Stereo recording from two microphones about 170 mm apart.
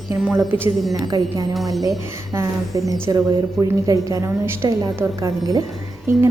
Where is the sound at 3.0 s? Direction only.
20° right (ahead or behind).